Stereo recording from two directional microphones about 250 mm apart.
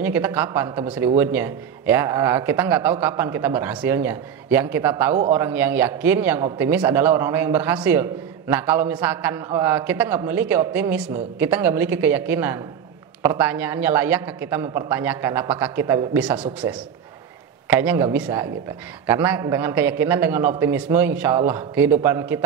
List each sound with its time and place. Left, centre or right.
0.0 s a man's voice: centre
16.3 s a man's voice: right
17.6 s a man's voice: centre